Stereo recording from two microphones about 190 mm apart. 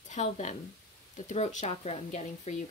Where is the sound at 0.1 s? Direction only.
40° left (ahead or behind).